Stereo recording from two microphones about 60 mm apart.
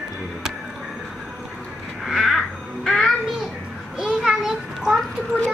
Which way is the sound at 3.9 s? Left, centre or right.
Centre.